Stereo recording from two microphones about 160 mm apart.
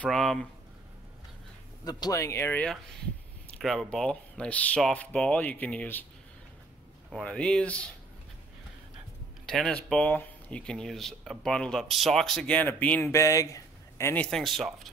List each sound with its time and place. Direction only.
0.0 s speech: centre (ahead or behind)
1.9 s speech: 25° left (ahead or behind)
3.5 s speech: centre (ahead or behind)
7.1 s speech: 5° left (ahead or behind)
9.5 s speech: 5° left (ahead or behind)